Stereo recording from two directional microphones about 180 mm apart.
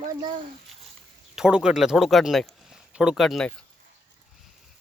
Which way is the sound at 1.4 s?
5° right (ahead or behind).